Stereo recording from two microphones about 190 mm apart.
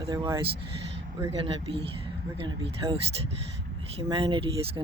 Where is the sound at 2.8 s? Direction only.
20° right (ahead or behind).